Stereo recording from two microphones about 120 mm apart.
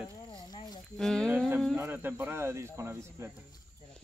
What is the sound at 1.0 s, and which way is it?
Speech, 5° left (ahead or behind).